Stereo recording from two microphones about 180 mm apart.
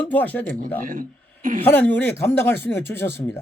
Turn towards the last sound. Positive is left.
turn(degrees=15)  # may be behind; listen again after turning